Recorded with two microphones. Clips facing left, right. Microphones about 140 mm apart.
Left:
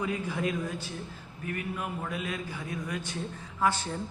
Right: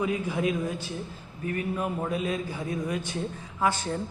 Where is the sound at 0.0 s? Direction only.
15° right (ahead or behind).